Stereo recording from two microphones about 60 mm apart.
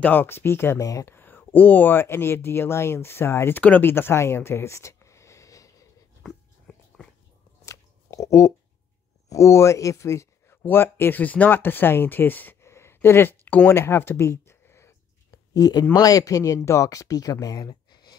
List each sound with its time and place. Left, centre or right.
0.0 s speech: left
0.7 s speech: left
1.0 s speech: left
3.5 s speech: left
6.2 s dog: centre
7.6 s a sound: left
9.3 s speech: left
10.5 s speech: left
12.6 s a sound: left
15.3 s a sound: left
15.9 s speech: left